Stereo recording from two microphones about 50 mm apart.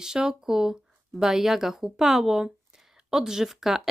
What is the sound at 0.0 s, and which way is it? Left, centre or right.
Speech, centre.